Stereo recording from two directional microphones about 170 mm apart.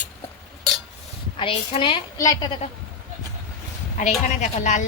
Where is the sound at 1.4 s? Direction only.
30° left (ahead or behind).